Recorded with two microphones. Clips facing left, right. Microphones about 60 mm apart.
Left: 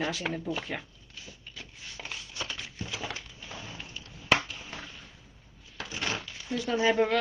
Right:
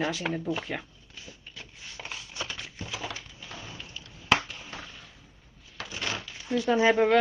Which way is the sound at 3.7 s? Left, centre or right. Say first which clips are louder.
Even; left.